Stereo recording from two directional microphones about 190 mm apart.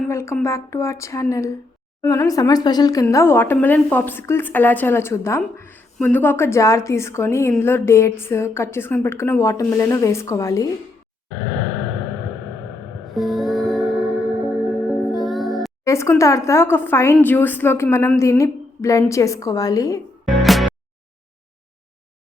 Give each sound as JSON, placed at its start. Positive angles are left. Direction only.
{"t": 0.1, "sound": "speech", "side_deg": 15}
{"t": 13.1, "sound": "music", "side_deg": 0}
{"t": 15.8, "sound": "speech", "side_deg": 15}
{"t": 20.4, "sound": "music", "side_deg": 0}